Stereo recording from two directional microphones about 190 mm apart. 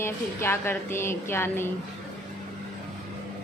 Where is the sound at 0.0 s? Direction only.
10° left (ahead or behind).